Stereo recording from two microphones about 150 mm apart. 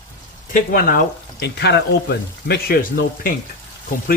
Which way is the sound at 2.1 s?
90° left.